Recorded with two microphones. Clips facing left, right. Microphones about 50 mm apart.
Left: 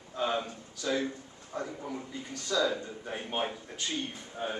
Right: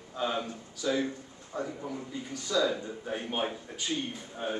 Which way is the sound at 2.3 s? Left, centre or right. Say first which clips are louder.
Right 1 dB; centre.